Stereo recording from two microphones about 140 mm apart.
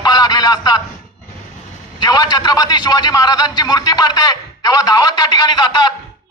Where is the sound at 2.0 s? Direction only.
30° left (ahead or behind).